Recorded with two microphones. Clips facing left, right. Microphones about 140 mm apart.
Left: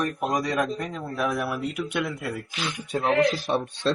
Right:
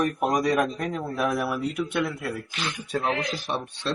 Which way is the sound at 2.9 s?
20° left (ahead or behind).